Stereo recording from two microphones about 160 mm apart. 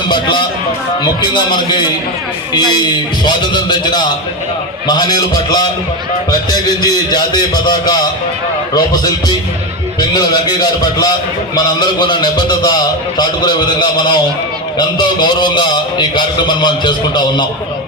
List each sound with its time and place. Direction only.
0.1 s a man's voice: 30° left (ahead or behind)